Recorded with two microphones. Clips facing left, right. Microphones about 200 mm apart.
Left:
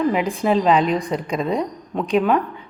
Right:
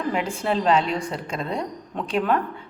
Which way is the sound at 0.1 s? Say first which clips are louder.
Left 5 dB; 15° left (ahead or behind).